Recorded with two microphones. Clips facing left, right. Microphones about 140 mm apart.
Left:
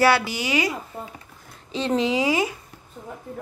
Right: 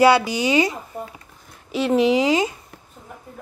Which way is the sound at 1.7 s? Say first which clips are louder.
Right 5 dB; 10° right (ahead or behind).